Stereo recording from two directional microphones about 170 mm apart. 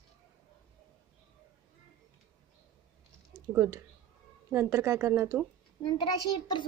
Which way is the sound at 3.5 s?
15° right (ahead or behind).